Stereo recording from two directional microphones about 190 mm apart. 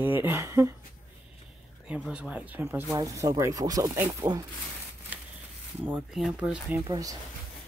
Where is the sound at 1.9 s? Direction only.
5° right (ahead or behind).